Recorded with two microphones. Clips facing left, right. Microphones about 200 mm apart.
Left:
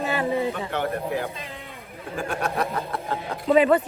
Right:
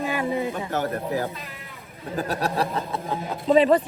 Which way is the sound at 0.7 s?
40° right (ahead or behind).